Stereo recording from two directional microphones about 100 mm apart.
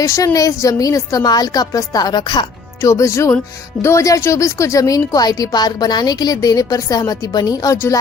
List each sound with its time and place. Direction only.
0.0 s a woman's voice: 30° left (ahead or behind); by 2.5 s 50° left (ahead or behind)
2.8 s a woman's voice: 30° left (ahead or behind)